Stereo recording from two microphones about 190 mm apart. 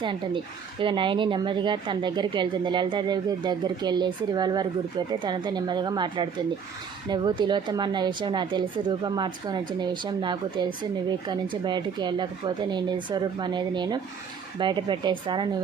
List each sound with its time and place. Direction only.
0.8 s a woman's voice: 25° right (ahead or behind)